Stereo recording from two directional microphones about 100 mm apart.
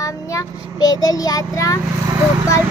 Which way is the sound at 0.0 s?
35° left (ahead or behind).